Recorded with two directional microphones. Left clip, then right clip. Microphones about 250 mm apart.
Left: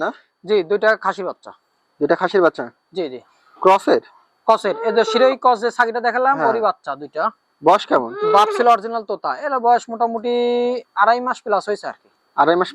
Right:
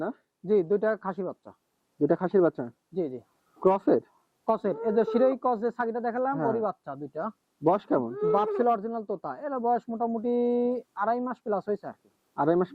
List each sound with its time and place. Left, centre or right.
0.0 s speech: centre
9.0 s speech: left
9.2 s speech: centre
9.9 s speech: centre
10.2 s speech: centre